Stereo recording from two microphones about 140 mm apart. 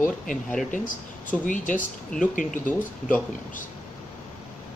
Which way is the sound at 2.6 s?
10° left (ahead or behind).